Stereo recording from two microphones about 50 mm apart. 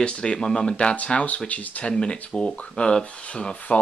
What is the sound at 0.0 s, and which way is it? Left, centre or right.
Speech, centre.